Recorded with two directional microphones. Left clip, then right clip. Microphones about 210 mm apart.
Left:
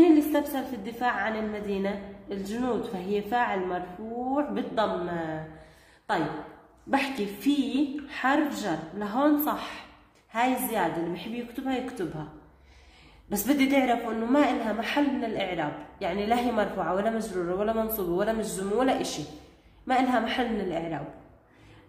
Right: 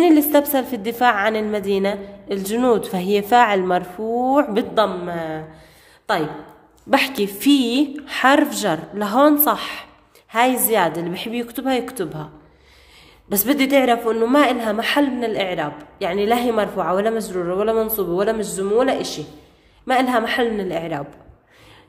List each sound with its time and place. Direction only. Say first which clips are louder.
0.0 s a woman's voice: right 7 dB; 55° right (ahead or behind)
6.9 s a woman's voice: right 10 dB; 45° right (ahead or behind)
13.3 s a woman's voice: right 8 dB; 35° right (ahead or behind)